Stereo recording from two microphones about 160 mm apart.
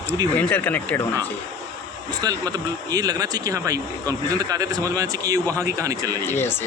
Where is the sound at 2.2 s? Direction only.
25° right (ahead or behind).